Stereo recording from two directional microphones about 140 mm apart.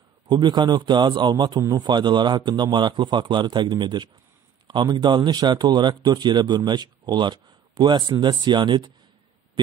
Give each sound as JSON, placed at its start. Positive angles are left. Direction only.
{"t": 0.3, "sound": "speech", "side_deg": -30}